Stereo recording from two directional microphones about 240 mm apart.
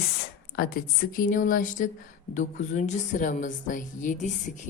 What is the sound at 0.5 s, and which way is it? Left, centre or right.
Speech, left.